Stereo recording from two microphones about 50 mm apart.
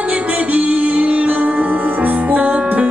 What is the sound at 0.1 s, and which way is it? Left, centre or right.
Music, right.